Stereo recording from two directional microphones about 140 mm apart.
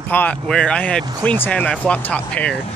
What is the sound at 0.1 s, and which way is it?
Speech, 10° left (ahead or behind).